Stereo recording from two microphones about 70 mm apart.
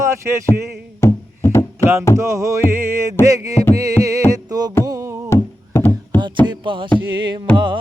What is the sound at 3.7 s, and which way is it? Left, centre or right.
Carnatic music, right.